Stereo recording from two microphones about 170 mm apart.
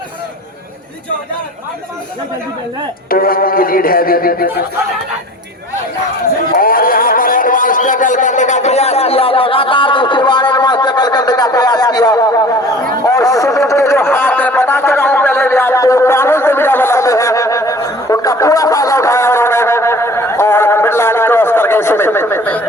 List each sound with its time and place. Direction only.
3.1 s speech: 60° left (ahead or behind)
6.6 s music: 55° left (ahead or behind); by 12.3 s 25° left (ahead or behind)
13.1 s a sound: 20° left (ahead or behind)